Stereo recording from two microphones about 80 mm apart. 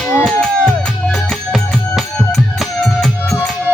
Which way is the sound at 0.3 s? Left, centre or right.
Centre.